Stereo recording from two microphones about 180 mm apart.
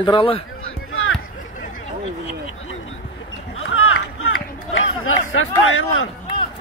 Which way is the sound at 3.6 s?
90° left.